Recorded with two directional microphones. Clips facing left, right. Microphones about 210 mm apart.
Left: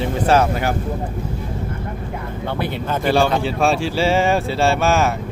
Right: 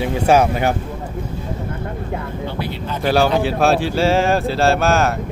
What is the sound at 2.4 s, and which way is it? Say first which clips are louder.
Speech: left 6 dB; 55° left (ahead or behind).